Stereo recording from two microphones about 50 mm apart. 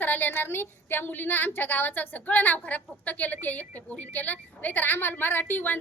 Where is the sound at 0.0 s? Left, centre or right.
Left.